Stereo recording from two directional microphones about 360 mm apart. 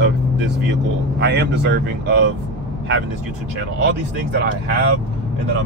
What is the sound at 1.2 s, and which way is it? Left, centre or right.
Speech, right.